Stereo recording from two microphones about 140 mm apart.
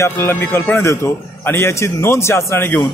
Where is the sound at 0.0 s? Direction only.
20° left (ahead or behind).